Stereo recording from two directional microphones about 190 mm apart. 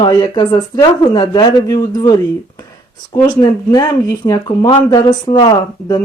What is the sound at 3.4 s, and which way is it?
Speech, 20° left (ahead or behind).